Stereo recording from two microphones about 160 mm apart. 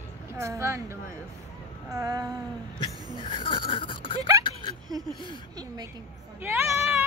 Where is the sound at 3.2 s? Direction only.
30° left (ahead or behind).